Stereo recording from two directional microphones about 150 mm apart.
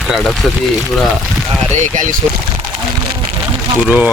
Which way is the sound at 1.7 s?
60° right (ahead or behind).